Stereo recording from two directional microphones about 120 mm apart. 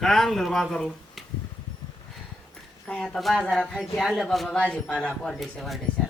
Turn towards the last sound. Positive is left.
turn(degrees=0)  # may be behind; listen again after turning